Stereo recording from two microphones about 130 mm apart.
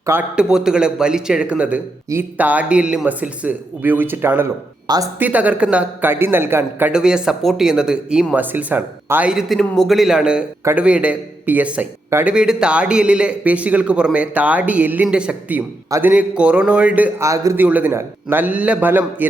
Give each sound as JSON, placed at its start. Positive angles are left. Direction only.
{"t": 0.0, "sound": "a man's voice", "side_deg": -15}
{"t": 0.3, "sound": "a man's voice", "side_deg": -5}
{"t": 4.9, "sound": "speech", "side_deg": -30}
{"t": 5.2, "sound": "a man's voice", "side_deg": -10}
{"t": 6.9, "sound": "speech", "side_deg": -5}
{"t": 9.3, "sound": "a man's voice", "side_deg": 0}
{"t": 17.2, "sound": "a man's voice", "side_deg": -25}
{"t": 17.6, "sound": "a man's voice", "side_deg": -15}